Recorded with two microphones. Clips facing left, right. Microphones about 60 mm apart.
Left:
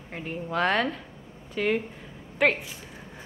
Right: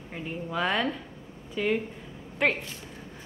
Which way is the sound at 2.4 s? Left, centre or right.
Centre.